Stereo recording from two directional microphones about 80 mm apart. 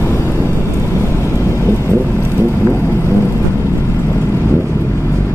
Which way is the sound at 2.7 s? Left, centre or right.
Left.